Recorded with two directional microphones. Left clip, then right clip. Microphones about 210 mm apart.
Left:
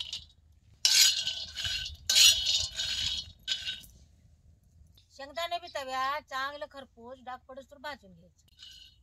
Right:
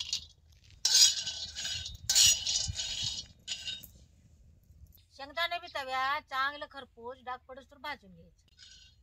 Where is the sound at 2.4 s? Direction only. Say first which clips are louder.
Left 4 dB; 15° left (ahead or behind).